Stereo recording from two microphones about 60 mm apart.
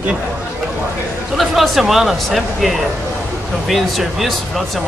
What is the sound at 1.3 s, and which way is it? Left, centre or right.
Speech, centre.